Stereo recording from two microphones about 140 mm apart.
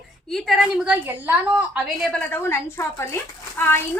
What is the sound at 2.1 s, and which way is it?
A woman's voice, 15° left (ahead or behind).